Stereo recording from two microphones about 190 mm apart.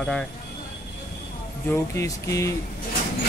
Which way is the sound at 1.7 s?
15° left (ahead or behind).